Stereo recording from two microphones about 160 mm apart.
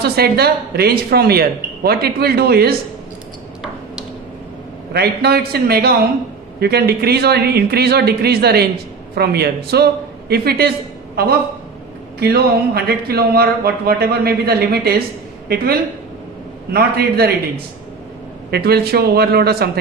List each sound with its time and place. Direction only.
0.0 s speech: 80° right
4.9 s speech: 75° right (ahead or behind)
18.5 s speech: 80° right